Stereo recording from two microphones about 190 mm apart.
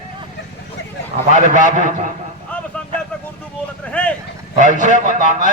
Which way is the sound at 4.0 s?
5° left (ahead or behind).